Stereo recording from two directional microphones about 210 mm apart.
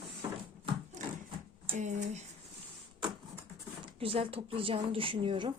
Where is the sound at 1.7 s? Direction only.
35° right (ahead or behind).